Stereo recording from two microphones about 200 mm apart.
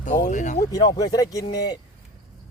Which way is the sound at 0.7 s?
20° left (ahead or behind).